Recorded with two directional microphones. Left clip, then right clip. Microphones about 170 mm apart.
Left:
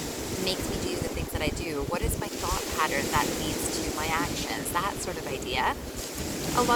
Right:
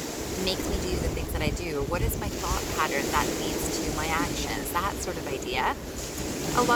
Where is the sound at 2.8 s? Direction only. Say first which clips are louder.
Even; 5° left (ahead or behind).